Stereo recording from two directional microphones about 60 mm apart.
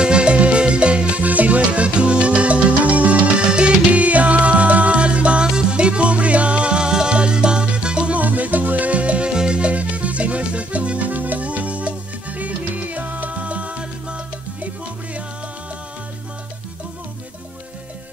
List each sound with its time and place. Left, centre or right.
0.0 s music: centre